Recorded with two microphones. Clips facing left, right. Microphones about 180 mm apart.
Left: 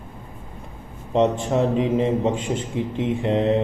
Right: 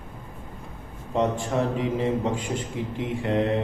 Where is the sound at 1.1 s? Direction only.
20° left (ahead or behind).